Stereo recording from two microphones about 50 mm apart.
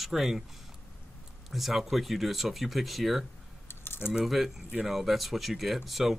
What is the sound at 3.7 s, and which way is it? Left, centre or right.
Keys jangling, left.